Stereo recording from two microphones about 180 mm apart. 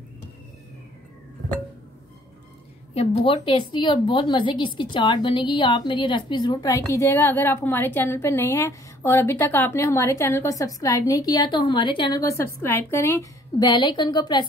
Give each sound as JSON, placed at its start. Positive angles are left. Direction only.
{"t": 2.9, "sound": "a woman's voice", "side_deg": 35}